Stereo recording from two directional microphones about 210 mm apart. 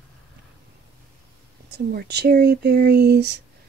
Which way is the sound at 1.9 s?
50° right (ahead or behind).